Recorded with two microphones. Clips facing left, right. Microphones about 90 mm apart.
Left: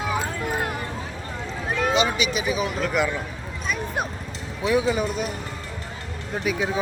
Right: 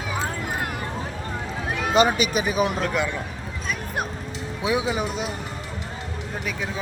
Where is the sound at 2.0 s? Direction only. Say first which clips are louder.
Right 3 dB; 45° right (ahead or behind).